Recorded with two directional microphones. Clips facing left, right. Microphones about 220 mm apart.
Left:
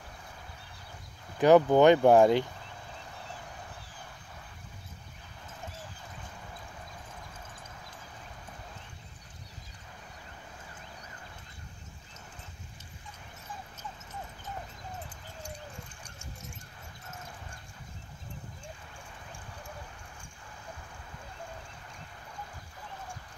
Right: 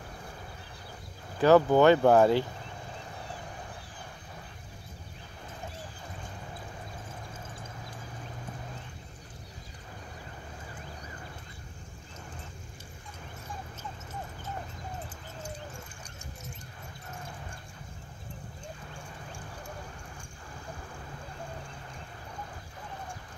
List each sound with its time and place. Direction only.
1.4 s speech: 15° left (ahead or behind)